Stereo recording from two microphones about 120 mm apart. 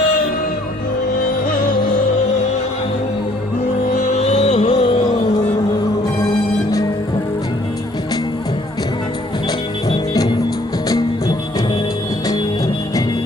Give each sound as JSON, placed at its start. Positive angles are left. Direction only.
{"t": 4.0, "sound": "music", "side_deg": 60}
{"t": 4.7, "sound": "music", "side_deg": 50}
{"t": 9.9, "sound": "music", "side_deg": 35}